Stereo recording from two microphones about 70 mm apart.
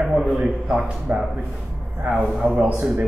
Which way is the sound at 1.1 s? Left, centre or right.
Right.